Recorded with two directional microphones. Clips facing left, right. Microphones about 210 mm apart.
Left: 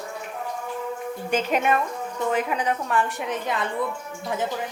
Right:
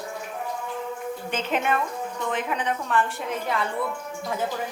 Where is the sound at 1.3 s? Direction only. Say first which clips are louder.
Left 4 dB; 10° left (ahead or behind).